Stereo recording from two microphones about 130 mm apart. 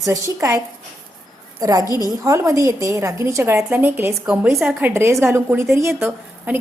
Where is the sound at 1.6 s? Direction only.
25° right (ahead or behind).